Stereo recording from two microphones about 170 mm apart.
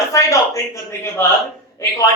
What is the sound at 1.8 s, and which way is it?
Speech, 20° left (ahead or behind).